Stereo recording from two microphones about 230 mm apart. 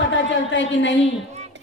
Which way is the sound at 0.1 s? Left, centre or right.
Left.